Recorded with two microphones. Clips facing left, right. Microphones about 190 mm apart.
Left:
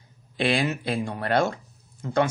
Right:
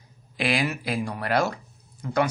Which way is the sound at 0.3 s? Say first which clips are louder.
Left 2 dB; 30° left (ahead or behind).